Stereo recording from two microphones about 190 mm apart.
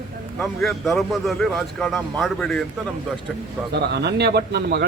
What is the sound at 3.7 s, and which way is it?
Speech, 60° right (ahead or behind).